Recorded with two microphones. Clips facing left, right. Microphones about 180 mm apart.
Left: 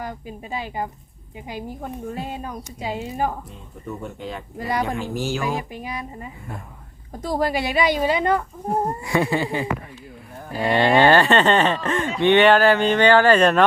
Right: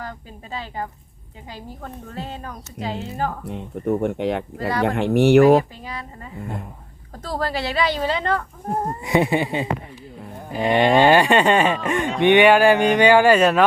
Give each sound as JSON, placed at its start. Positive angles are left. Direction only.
{"t": 0.0, "sound": "speech", "side_deg": 15}
{"t": 3.4, "sound": "speech", "side_deg": -65}
{"t": 5.7, "sound": "speech", "side_deg": 15}
{"t": 7.2, "sound": "speech", "side_deg": 15}
{"t": 9.0, "sound": "speech", "side_deg": -20}